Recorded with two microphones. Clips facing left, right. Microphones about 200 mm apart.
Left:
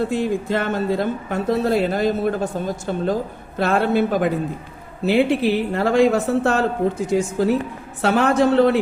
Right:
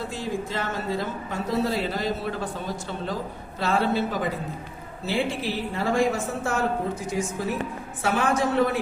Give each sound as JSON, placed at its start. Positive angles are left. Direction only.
{"t": 0.1, "sound": "speech", "side_deg": 60}